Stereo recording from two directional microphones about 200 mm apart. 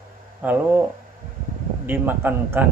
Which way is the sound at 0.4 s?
10° right (ahead or behind).